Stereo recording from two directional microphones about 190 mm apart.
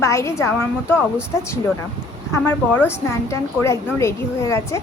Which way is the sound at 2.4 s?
10° left (ahead or behind).